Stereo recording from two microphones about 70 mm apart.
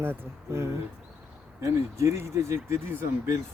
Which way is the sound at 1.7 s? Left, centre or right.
Right.